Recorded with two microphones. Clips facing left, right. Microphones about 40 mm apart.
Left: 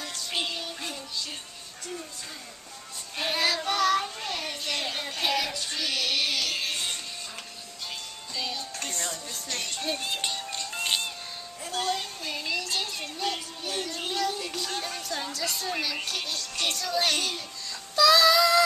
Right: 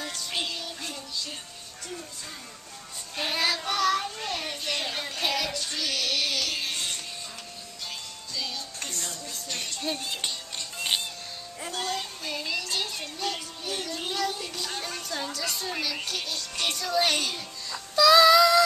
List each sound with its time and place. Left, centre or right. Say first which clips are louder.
0.0 s music: even; centre
3.2 s child singing: left 1 dB; centre
5.1 s music: left 1 dB; centre
8.4 s music: left 1 dB; left
8.9 s music: left 2 dB; left
10.1 s music: left 2 dB; centre
17.9 s a sound: right 3 dB; centre